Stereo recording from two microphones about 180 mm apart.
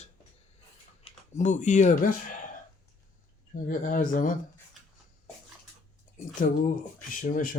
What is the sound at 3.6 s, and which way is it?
Speech, 45° left (ahead or behind).